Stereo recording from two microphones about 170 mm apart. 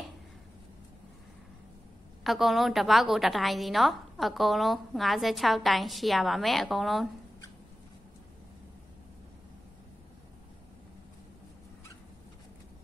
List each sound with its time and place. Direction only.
2.2 s a woman's voice: centre (ahead or behind)